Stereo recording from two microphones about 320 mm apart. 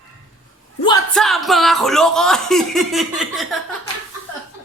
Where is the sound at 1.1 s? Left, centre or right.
Centre.